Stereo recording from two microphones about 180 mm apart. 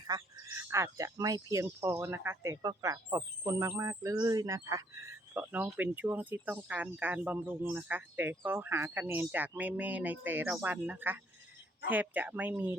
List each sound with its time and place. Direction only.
0.1 s speech: 15° right (ahead or behind)